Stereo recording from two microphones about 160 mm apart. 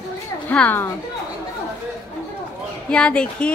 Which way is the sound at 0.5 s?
10° left (ahead or behind).